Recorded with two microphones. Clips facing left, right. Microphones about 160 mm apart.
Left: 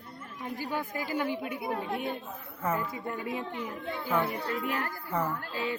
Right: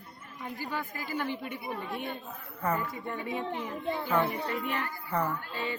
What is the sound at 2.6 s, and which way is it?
A man's voice, centre (ahead or behind).